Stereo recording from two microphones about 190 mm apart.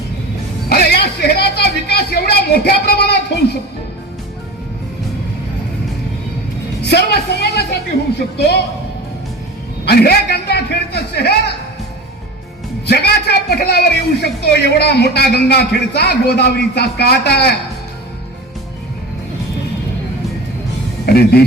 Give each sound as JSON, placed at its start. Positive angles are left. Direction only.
{"t": 0.7, "sound": "a sound", "side_deg": 55}
{"t": 6.8, "sound": "speech", "side_deg": 60}
{"t": 9.8, "sound": "speech", "side_deg": 55}
{"t": 12.8, "sound": "speech", "side_deg": 60}
{"t": 21.1, "sound": "speech", "side_deg": 55}